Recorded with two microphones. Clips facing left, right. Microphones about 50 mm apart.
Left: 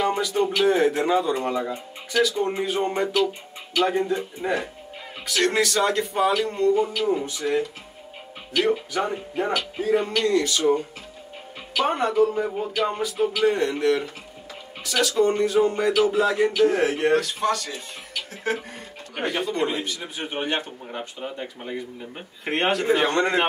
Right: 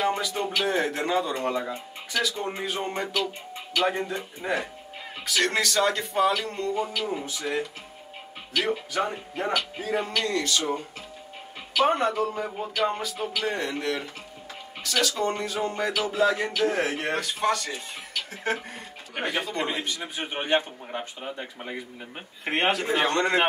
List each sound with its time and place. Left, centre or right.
0.0 s speech: centre
20.3 s a man's voice: right
21.2 s speech: centre